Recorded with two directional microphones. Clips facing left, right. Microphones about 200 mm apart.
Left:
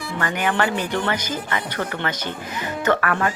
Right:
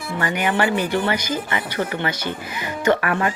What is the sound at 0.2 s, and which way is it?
Speech, 10° right (ahead or behind).